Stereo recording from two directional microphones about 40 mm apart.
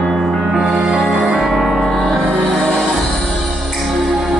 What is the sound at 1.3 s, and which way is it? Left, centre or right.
Music, centre.